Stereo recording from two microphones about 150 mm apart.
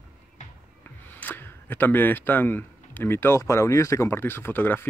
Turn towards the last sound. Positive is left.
turn(degrees=15)  # may be behind; listen again after turning